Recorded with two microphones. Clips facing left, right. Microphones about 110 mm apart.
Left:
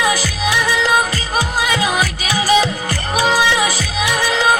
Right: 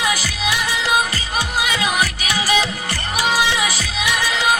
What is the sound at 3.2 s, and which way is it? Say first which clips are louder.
Music: left 3 dB; 35° left (ahead or behind).